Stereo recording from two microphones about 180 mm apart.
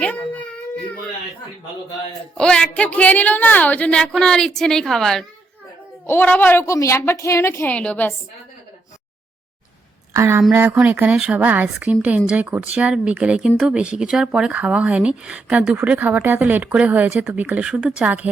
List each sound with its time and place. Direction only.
0.0 s a sound: 5° left (ahead or behind)
2.4 s a woman's voice: 5° left (ahead or behind)
10.1 s speech: 15° right (ahead or behind)